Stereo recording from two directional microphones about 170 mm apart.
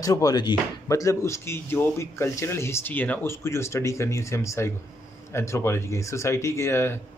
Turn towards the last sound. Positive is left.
turn(degrees=15)  # may be behind; listen again after turning